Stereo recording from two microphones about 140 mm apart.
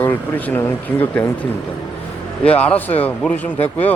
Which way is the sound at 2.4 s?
10° left (ahead or behind).